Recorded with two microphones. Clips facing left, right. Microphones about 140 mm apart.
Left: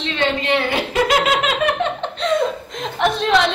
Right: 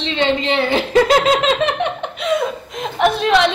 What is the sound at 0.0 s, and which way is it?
A woman's voice, 25° right (ahead or behind).